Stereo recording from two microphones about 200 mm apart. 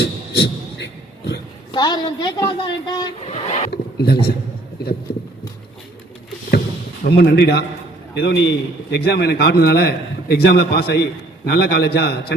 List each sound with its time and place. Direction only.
0.0 s beatboxing: 60° left (ahead or behind)
1.7 s a woman's voice: 20° left (ahead or behind)
3.2 s vehicle: 35° left (ahead or behind)
3.7 s speech: 55° left (ahead or behind)
5.1 s a sound: 50° left (ahead or behind)
7.0 s a man's voice: 60° left (ahead or behind)